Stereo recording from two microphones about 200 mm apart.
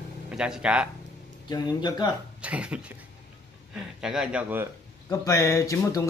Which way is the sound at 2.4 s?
5° right (ahead or behind).